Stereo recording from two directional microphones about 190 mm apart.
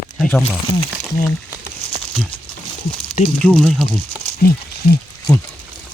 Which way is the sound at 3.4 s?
5° left (ahead or behind).